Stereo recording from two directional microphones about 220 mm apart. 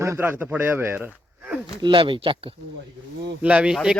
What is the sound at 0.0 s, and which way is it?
Speech, 10° right (ahead or behind).